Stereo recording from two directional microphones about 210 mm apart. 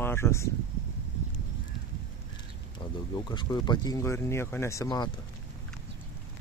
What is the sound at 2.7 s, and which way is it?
Speech, 20° left (ahead or behind).